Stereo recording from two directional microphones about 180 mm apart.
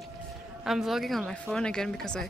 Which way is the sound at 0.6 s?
Centre (ahead or behind).